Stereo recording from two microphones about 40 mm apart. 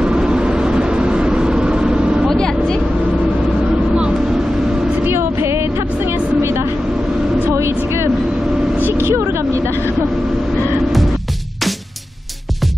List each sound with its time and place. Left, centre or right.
0.0 s vehicle: right
2.2 s vehicle: centre
5.0 s vehicle: right
8.9 s vehicle: right